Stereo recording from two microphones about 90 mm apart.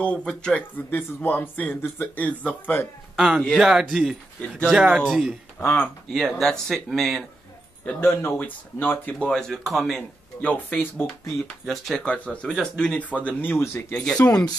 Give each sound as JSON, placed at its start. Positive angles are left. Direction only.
{"t": 0.0, "sound": "speech", "side_deg": 10}
{"t": 0.7, "sound": "speech", "side_deg": 25}
{"t": 3.2, "sound": "speech", "side_deg": -5}
{"t": 5.0, "sound": "speech", "side_deg": 5}
{"t": 5.6, "sound": "speech", "side_deg": 30}
{"t": 6.1, "sound": "speech", "side_deg": 0}
{"t": 8.0, "sound": "speech", "side_deg": 25}
{"t": 9.3, "sound": "speech", "side_deg": 0}
{"t": 10.4, "sound": "speech", "side_deg": 15}
{"t": 11.6, "sound": "speech", "side_deg": 0}
{"t": 12.0, "sound": "speech", "side_deg": 15}
{"t": 13.9, "sound": "speech", "side_deg": 10}